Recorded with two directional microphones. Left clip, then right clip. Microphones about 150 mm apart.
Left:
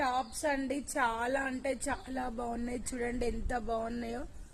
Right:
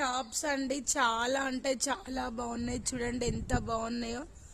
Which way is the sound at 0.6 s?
40° right (ahead or behind).